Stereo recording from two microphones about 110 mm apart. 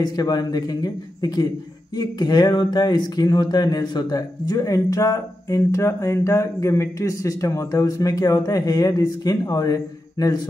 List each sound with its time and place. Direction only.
0.0 s speech: 35° left (ahead or behind)